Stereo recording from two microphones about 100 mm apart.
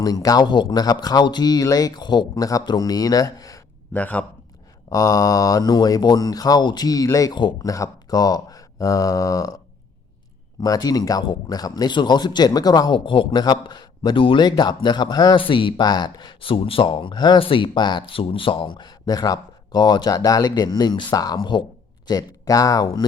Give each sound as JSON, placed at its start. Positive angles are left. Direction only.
{"t": 0.0, "sound": "speech", "side_deg": 40}
{"t": 3.9, "sound": "a man's voice", "side_deg": 15}
{"t": 4.9, "sound": "speech", "side_deg": 35}
{"t": 10.6, "sound": "speech", "side_deg": 40}